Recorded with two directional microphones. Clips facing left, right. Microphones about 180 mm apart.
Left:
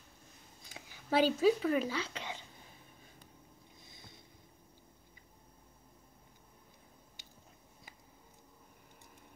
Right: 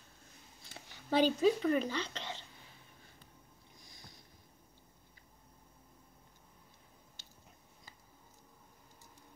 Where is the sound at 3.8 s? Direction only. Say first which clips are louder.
Even; 25° left (ahead or behind).